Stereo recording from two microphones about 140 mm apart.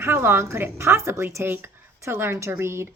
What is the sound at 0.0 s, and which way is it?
A woman's voice, 15° right (ahead or behind).